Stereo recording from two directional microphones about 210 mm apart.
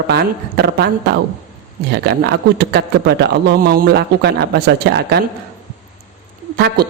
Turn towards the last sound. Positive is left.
turn(degrees=-50)  # may be behind; listen again after turning